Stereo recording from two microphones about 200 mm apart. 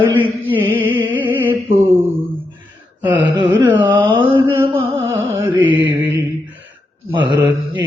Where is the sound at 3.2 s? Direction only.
25° right (ahead or behind).